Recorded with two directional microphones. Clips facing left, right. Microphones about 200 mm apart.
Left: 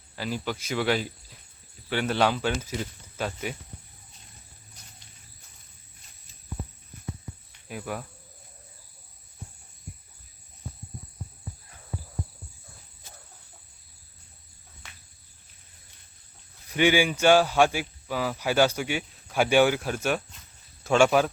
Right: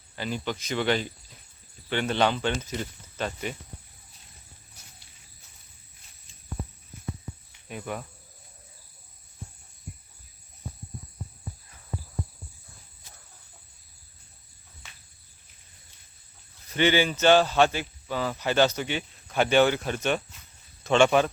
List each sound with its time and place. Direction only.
0.2 s speech: 5° left (ahead or behind)
7.7 s speech: centre (ahead or behind)
16.6 s speech: 10° left (ahead or behind)